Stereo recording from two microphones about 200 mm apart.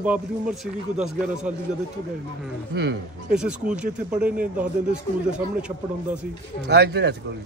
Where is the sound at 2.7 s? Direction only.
60° right (ahead or behind).